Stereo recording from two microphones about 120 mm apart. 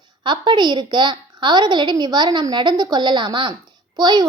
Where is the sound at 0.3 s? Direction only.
40° right (ahead or behind).